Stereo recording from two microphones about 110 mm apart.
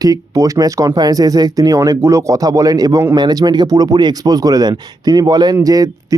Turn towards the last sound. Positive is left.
turn(degrees=-30)  # may be behind; listen again after turning